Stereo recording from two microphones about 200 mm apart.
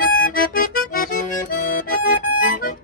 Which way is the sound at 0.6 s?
45° left (ahead or behind).